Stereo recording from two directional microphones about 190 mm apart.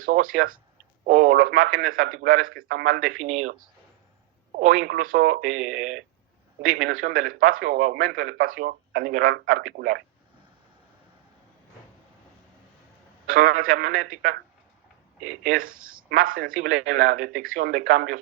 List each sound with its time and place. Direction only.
0.0 s a man's voice: 45° right (ahead or behind)
13.2 s a man's voice: 50° right (ahead or behind)
15.4 s a man's voice: 45° right (ahead or behind)